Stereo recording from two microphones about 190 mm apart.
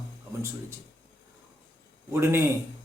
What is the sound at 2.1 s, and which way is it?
Speech, 15° right (ahead or behind).